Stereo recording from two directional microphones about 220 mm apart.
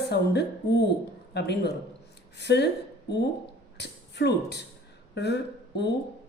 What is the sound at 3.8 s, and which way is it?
A woman's voice, 50° left (ahead or behind).